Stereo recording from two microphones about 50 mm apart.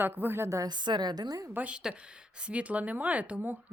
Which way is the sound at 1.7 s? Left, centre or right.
Centre.